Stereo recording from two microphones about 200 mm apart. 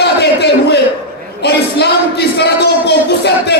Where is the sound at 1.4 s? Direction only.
55° left (ahead or behind).